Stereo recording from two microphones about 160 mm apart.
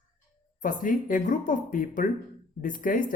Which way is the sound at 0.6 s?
60° left (ahead or behind).